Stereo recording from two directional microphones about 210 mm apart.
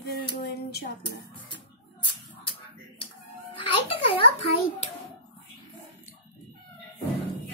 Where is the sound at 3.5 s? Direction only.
25° left (ahead or behind).